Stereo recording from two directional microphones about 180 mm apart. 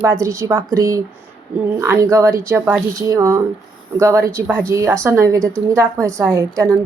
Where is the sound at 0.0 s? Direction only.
15° right (ahead or behind).